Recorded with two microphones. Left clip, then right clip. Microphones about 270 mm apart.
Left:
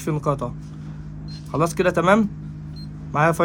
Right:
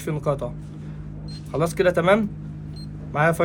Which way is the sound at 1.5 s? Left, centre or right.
Left.